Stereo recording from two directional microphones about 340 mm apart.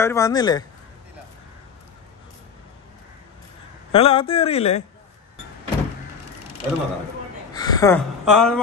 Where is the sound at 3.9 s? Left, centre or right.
Centre.